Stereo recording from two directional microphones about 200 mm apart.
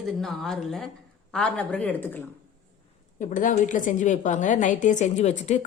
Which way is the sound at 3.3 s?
40° left (ahead or behind).